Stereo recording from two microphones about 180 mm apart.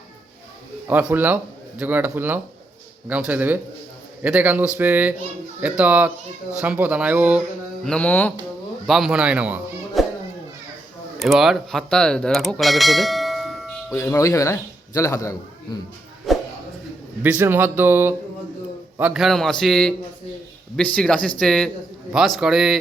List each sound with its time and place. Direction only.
0.9 s speech: 10° right (ahead or behind)
7.9 s a man's voice: 5° left (ahead or behind)
8.9 s speech: centre (ahead or behind)
11.2 s speech: centre (ahead or behind)
13.9 s a man's voice: 15° left (ahead or behind)
16.3 s a sound: centre (ahead or behind)
17.2 s a man's voice: 10° right (ahead or behind)